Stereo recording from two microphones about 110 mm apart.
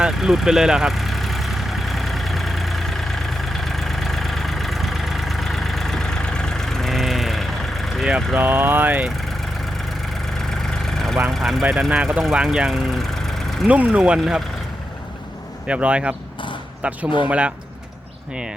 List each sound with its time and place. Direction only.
0.0 s vehicle: 5° right (ahead or behind)
8.4 s speech: 20° right (ahead or behind)
10.6 s vehicle: 5° left (ahead or behind)
11.3 s speech: centre (ahead or behind)
13.7 s speech: 15° right (ahead or behind)
15.6 s speech: 10° right (ahead or behind)